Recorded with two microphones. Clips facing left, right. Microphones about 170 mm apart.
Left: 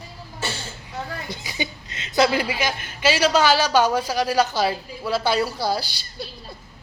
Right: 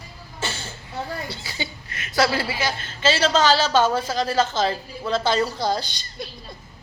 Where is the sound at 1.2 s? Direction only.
15° left (ahead or behind).